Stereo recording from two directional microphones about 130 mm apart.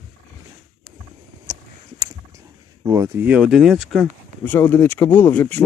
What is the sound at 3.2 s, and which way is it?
Speech, 10° right (ahead or behind).